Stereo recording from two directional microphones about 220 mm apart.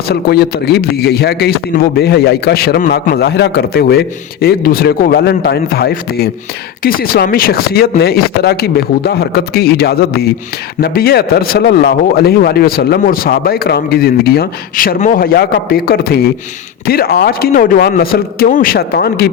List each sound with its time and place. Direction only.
0.1 s a man's voice: 45° left (ahead or behind)